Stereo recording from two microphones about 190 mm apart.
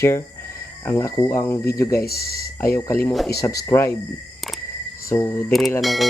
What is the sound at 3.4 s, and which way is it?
Speech, 15° left (ahead or behind).